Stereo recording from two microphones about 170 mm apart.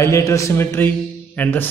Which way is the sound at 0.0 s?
20° left (ahead or behind).